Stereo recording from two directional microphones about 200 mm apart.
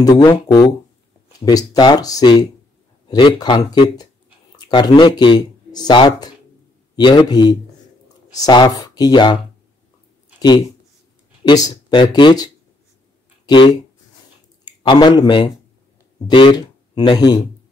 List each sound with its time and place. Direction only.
0.0 s speech: 15° left (ahead or behind)
11.4 s speech: 20° left (ahead or behind)
13.5 s speech: 20° left (ahead or behind)